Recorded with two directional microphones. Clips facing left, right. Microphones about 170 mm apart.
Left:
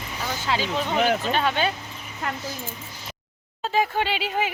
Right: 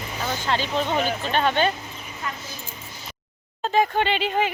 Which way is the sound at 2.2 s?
70° left (ahead or behind).